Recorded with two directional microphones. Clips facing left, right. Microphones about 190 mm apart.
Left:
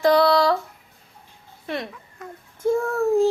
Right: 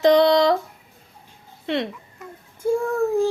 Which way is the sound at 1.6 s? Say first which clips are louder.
Right 5 dB; 25° right (ahead or behind).